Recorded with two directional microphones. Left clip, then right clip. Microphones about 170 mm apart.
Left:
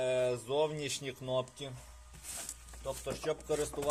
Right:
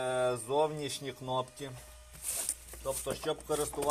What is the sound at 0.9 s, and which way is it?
Speech, 20° left (ahead or behind).